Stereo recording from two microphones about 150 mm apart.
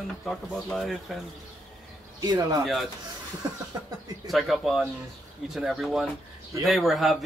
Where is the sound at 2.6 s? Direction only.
Centre (ahead or behind).